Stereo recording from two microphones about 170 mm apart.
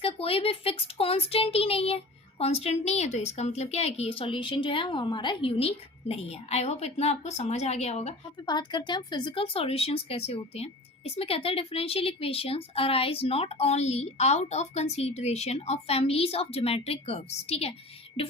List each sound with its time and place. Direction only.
0.0 s speech: 35° left (ahead or behind)
8.4 s speech: 25° left (ahead or behind)